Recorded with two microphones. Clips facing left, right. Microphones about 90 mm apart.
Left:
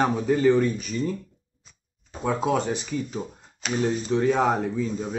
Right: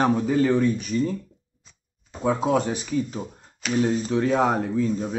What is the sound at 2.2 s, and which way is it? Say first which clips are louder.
Speech: right 2 dB; centre (ahead or behind).